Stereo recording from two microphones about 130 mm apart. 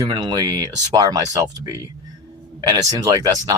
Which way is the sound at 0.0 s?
35° right (ahead or behind).